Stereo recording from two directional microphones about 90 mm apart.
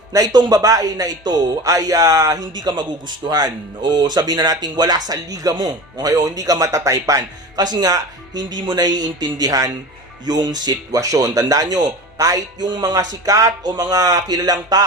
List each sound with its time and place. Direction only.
0.1 s speech: 45° right (ahead or behind)